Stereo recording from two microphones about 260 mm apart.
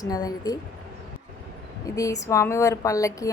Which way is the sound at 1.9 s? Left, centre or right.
Centre.